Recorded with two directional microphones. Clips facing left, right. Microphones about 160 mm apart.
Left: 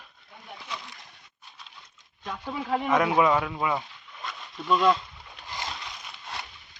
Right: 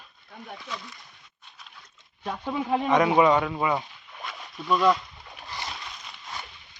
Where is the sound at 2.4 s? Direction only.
20° right (ahead or behind).